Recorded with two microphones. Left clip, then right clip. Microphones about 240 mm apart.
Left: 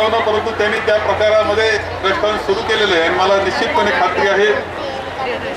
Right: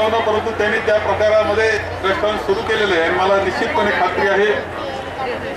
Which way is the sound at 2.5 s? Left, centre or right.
Centre.